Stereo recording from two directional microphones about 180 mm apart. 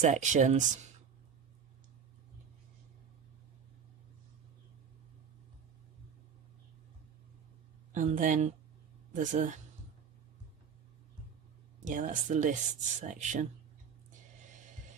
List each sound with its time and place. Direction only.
0.0 s speech: 40° right (ahead or behind)
7.9 s speech: 45° right (ahead or behind)
11.8 s speech: 45° right (ahead or behind)